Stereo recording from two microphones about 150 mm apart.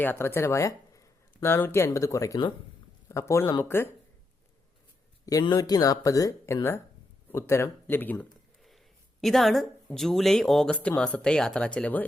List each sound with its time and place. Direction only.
0.0 s speech: 15° left (ahead or behind)
5.2 s speech: 25° left (ahead or behind)
9.2 s speech: centre (ahead or behind)